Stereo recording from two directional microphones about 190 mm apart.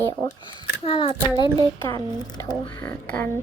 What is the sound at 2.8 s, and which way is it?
Speech, 10° left (ahead or behind).